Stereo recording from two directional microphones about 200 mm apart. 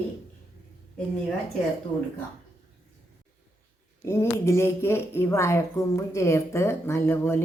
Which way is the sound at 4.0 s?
15° left (ahead or behind).